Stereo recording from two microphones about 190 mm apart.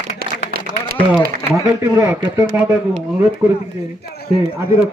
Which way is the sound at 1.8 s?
15° right (ahead or behind).